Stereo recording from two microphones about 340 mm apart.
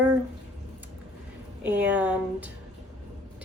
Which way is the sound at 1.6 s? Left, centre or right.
Centre.